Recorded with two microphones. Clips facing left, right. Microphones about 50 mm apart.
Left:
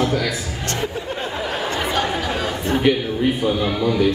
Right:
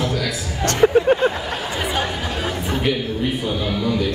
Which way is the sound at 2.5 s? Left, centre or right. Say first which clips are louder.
Left 3 dB; centre.